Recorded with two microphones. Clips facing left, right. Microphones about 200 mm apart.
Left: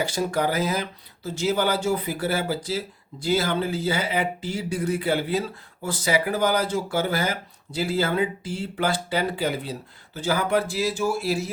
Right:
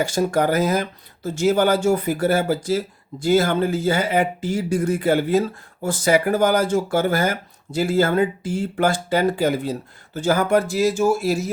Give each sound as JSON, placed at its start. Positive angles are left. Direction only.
{"t": 0.0, "sound": "speech", "side_deg": -45}